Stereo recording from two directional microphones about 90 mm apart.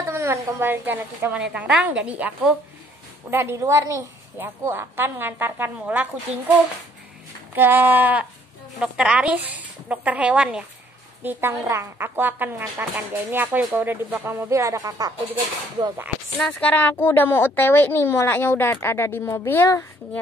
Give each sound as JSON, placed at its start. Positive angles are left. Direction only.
{"t": 0.0, "sound": "a woman's voice", "side_deg": -30}
{"t": 1.4, "sound": "speech", "side_deg": -10}
{"t": 3.3, "sound": "a woman's voice", "side_deg": -25}
{"t": 7.5, "sound": "a woman's voice", "side_deg": -20}
{"t": 8.7, "sound": "speech", "side_deg": -5}
{"t": 11.2, "sound": "a woman's voice", "side_deg": -30}
{"t": 14.5, "sound": "a woman's voice", "side_deg": -35}
{"t": 16.3, "sound": "a woman's voice", "side_deg": 10}